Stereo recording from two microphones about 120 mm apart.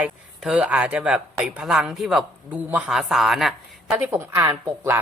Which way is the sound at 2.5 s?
15° right (ahead or behind).